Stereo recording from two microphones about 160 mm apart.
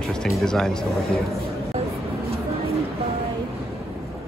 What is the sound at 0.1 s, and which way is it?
Speech, 5° left (ahead or behind).